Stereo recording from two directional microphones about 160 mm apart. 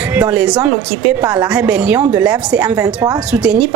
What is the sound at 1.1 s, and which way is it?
A woman's voice, 10° right (ahead or behind).